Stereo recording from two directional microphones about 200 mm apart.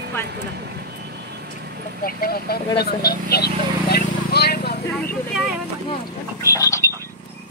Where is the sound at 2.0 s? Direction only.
45° left (ahead or behind).